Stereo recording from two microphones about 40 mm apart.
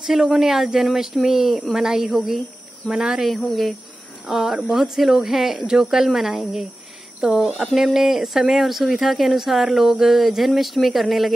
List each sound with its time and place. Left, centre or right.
0.2 s speech: right
0.6 s speech: centre
1.3 s speech: right
1.7 s speech: centre
2.8 s speech: left
3.3 s speech: centre
4.3 s speech: centre